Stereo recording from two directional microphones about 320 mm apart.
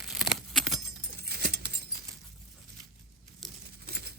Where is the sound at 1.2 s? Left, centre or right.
Right.